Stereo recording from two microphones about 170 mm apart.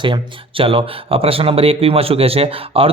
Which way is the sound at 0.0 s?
30° right (ahead or behind).